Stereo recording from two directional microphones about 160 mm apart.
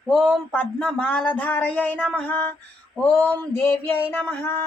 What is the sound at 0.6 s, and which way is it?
Speech, 5° left (ahead or behind).